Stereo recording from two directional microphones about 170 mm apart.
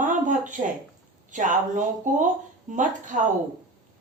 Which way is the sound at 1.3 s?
50° right (ahead or behind).